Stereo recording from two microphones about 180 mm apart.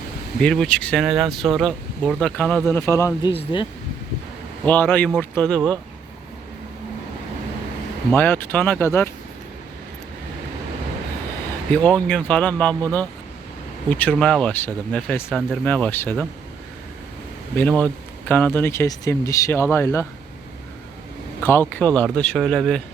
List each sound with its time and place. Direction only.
0.3 s speech: centre (ahead or behind)
3.2 s speech: 30° left (ahead or behind)
4.6 s speech: 10° left (ahead or behind)
8.1 s speech: 10° left (ahead or behind)
11.7 s speech: 5° left (ahead or behind)
17.6 s speech: 5° left (ahead or behind)
21.4 s speech: 10° left (ahead or behind)